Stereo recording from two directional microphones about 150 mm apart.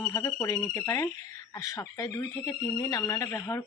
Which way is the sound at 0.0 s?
20° left (ahead or behind).